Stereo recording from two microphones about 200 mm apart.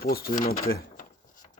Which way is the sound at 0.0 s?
50° left (ahead or behind).